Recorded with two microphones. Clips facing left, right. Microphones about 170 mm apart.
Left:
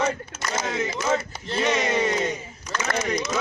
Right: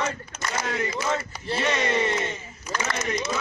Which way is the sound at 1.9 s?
15° left (ahead or behind).